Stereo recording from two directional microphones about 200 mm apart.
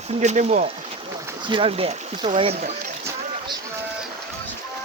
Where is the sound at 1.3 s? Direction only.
25° right (ahead or behind).